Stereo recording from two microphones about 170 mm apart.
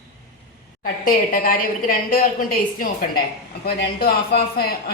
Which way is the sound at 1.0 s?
55° left (ahead or behind).